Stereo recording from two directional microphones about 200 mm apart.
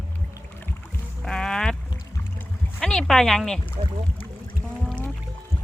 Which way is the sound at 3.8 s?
30° right (ahead or behind).